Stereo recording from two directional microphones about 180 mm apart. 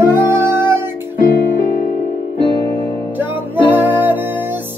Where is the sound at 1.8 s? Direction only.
45° left (ahead or behind).